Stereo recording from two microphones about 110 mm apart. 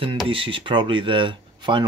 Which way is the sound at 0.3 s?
55° right (ahead or behind).